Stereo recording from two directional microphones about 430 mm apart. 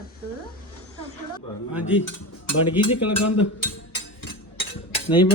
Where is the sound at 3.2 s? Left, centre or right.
Left.